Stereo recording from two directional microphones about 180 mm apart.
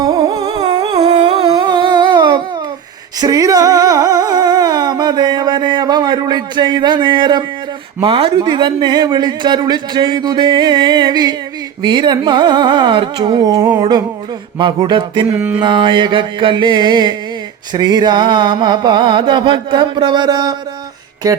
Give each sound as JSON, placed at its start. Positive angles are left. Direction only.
{"t": 0.0, "sound": "music", "side_deg": -20}
{"t": 1.0, "sound": "humming", "side_deg": -35}
{"t": 3.2, "sound": "a sound", "side_deg": -20}
{"t": 8.0, "sound": "a man's voice", "side_deg": -30}
{"t": 15.4, "sound": "a sound", "side_deg": -10}
{"t": 15.6, "sound": "a man's voice", "side_deg": -25}